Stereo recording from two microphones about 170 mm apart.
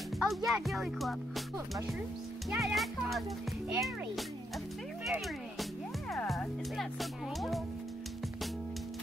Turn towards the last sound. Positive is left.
turn(degrees=0)  # may be behind; listen again after turning